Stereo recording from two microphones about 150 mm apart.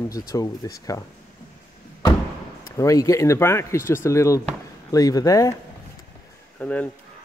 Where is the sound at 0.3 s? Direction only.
25° left (ahead or behind).